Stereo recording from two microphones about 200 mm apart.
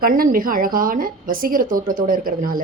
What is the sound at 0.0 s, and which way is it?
A woman's voice, 45° right (ahead or behind).